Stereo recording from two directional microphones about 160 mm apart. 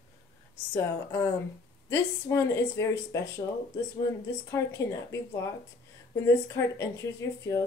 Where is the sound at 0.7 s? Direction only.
15° left (ahead or behind).